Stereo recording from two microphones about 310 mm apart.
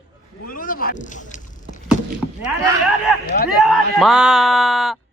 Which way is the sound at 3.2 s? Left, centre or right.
Left.